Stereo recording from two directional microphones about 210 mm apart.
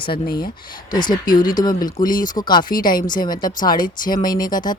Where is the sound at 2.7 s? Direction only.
40° left (ahead or behind).